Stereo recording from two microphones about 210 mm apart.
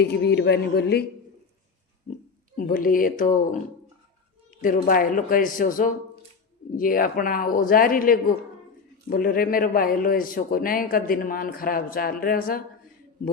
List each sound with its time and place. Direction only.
0.0 s a man's voice: 50° left (ahead or behind)
2.6 s a man's voice: 40° left (ahead or behind)
4.6 s a man's voice: 40° left (ahead or behind)